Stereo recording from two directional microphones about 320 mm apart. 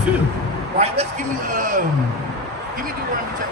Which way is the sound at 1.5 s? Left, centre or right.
Right.